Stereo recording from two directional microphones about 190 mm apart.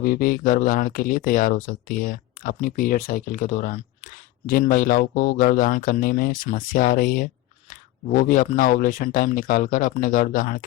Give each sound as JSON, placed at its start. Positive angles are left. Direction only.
{"t": 0.0, "sound": "speech", "side_deg": 50}